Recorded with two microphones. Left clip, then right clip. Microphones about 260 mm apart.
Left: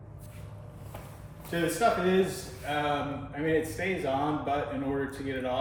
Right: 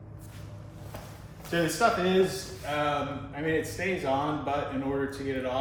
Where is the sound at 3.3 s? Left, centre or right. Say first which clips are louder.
Left 2 dB; centre.